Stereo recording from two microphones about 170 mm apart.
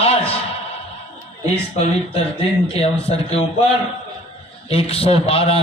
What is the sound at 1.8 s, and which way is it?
A man's voice, 35° left (ahead or behind).